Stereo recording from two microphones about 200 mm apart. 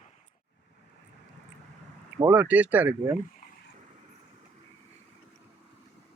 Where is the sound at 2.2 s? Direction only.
10° right (ahead or behind).